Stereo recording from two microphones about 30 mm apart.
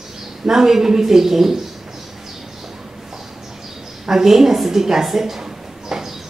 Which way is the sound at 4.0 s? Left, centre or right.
Centre.